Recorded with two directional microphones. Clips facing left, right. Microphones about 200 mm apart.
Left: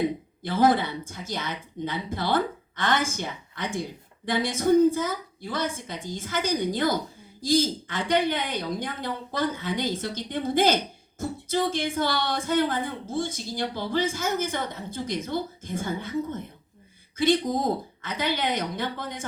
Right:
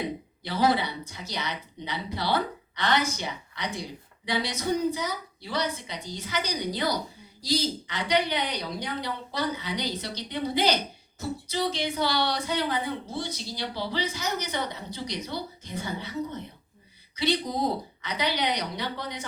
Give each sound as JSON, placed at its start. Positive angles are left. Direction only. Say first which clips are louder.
{"t": 0.4, "sound": "speech", "louder": "left 3 dB", "side_deg": 50}